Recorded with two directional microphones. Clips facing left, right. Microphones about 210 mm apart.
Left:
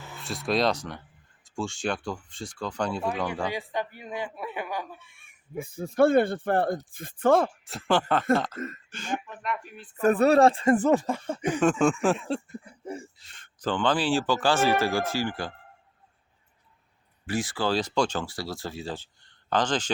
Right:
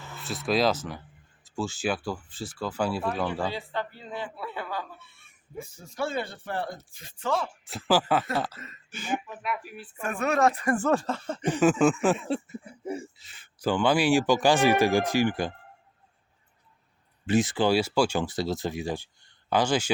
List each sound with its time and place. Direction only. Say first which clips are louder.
0.2 s speech: right 1 dB; centre (ahead or behind)
3.5 s speech: left 2 dB; 15° left (ahead or behind)
5.5 s speech: left 10 dB; 55° left (ahead or behind)
7.6 s speech: right 1 dB; centre (ahead or behind)
8.5 s speech: left 12 dB; 50° left (ahead or behind)
8.9 s speech: right 7 dB; 5° right (ahead or behind)
10.0 s speech: left 6 dB; 35° left (ahead or behind); by 11.6 s 10° left (ahead or behind)
11.6 s speech: right 1 dB; 5° right (ahead or behind)
17.2 s speech: right 5 dB; 20° right (ahead or behind)